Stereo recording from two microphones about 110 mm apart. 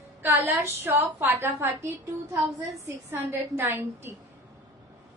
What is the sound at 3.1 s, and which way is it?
A woman's voice, 20° right (ahead or behind).